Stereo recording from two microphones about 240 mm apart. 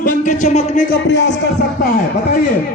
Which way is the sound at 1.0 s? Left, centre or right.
Left.